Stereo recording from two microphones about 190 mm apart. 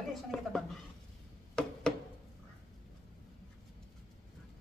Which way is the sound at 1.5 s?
5° left (ahead or behind).